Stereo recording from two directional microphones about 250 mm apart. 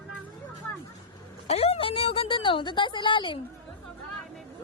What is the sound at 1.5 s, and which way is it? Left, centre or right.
A woman's voice, left.